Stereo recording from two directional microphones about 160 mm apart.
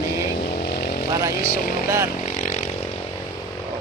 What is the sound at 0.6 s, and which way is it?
Vehicle, 75° left (ahead or behind).